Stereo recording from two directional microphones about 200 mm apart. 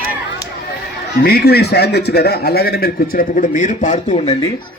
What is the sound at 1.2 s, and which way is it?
A man's voice, 55° left (ahead or behind).